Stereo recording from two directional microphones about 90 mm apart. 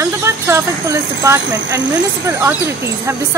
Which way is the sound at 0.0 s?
30° right (ahead or behind).